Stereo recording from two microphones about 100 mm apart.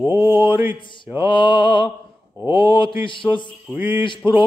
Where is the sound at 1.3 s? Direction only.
55° left (ahead or behind).